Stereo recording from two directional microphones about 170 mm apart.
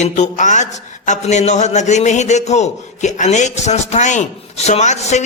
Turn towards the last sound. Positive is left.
turn(degrees=40)  # may be behind; listen again after turning